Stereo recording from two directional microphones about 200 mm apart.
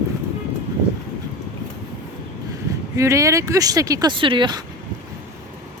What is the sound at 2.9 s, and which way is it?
Speech, 15° right (ahead or behind).